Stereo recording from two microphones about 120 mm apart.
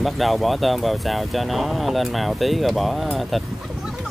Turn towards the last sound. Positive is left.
turn(degrees=-5)  # may be behind; listen again after turning